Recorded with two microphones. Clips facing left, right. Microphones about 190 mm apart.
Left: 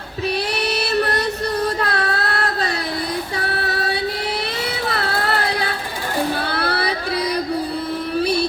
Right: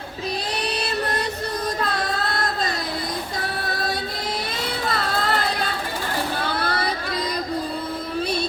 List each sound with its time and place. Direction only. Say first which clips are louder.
0.5 s a sound: left 5 dB; 70° left (ahead or behind)
1.8 s child singing: left 3 dB; 70° left (ahead or behind)
3.3 s female singing: left 4 dB; 70° left (ahead or behind)
4.9 s music: left 1 dB; 65° left (ahead or behind)
6.5 s child singing: left 3 dB; 70° left (ahead or behind)
8.2 s music: left 6 dB; 70° left (ahead or behind)